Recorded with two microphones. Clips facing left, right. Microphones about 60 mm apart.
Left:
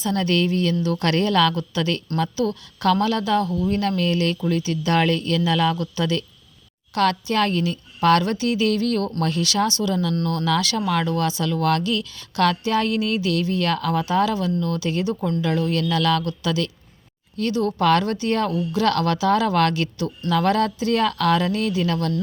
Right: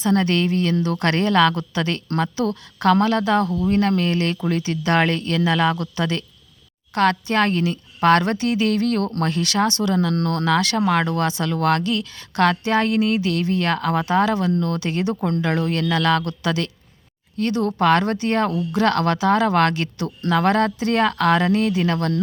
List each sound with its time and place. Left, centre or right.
0.0 s speech: right
10.2 s speech: right
10.5 s speech: right
17.7 s speech: right